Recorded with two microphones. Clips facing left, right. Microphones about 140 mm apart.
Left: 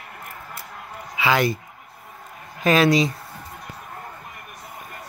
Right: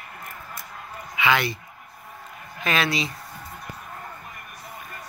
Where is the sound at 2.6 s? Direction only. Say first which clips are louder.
Left 8 dB; 40° left (ahead or behind).